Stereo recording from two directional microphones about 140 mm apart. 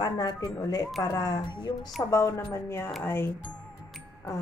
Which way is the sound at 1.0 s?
25° left (ahead or behind).